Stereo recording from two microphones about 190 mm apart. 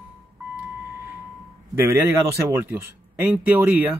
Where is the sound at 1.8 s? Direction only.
15° right (ahead or behind).